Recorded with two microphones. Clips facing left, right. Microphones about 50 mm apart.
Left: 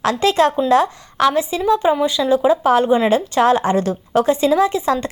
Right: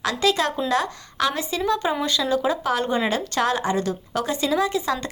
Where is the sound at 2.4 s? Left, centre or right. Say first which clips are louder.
Left 9 dB; left.